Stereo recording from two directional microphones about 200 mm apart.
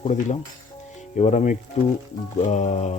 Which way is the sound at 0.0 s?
35° left (ahead or behind).